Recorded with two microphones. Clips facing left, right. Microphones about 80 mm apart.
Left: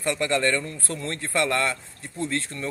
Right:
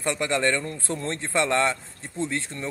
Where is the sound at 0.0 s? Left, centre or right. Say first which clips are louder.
Left 1 dB; right.